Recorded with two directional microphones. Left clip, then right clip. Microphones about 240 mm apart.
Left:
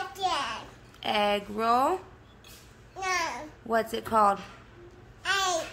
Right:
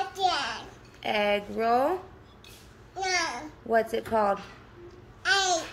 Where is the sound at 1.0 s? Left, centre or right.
Centre.